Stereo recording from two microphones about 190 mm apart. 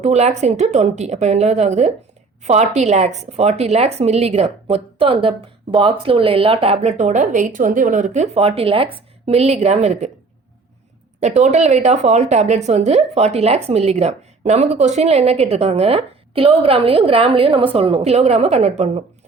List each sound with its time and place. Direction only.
0.0 s speech: 35° right (ahead or behind)
11.2 s speech: 35° right (ahead or behind)